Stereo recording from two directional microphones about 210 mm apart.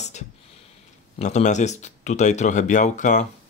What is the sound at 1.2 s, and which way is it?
Speech, 35° left (ahead or behind).